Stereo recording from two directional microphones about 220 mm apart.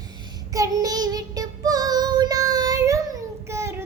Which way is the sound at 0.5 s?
15° right (ahead or behind).